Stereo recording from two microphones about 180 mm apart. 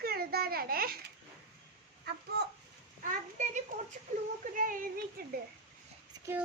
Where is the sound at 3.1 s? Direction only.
45° right (ahead or behind).